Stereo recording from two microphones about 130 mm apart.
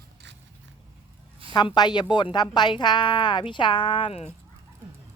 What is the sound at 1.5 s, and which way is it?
Speech, 35° left (ahead or behind).